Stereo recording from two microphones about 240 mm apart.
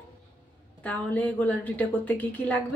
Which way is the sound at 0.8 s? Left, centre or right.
Centre.